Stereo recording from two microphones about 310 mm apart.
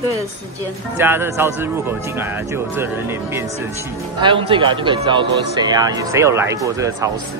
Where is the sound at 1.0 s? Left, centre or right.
Centre.